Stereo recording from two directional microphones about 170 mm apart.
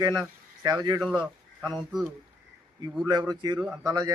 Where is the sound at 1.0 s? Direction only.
Centre (ahead or behind).